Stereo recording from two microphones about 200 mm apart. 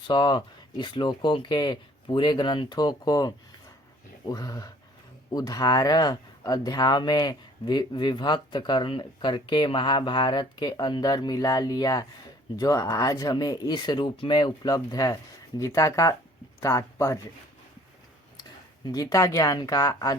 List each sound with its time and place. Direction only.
0.1 s speech: 20° left (ahead or behind)
18.9 s speech: 15° left (ahead or behind)